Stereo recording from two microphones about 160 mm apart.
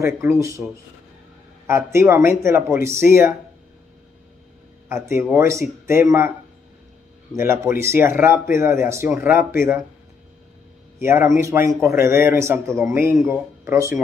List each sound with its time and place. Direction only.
0.0 s speech: 15° right (ahead or behind)
1.7 s speech: 15° right (ahead or behind)
4.8 s speech: 15° right (ahead or behind)
7.3 s speech: 15° right (ahead or behind)
11.0 s speech: 15° right (ahead or behind)